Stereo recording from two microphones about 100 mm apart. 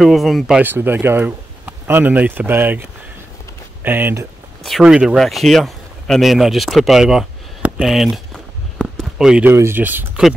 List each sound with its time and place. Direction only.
0.0 s speech: centre (ahead or behind)
0.6 s speech: 20° right (ahead or behind)
4.6 s speech: 5° right (ahead or behind)
9.4 s speech: 25° right (ahead or behind)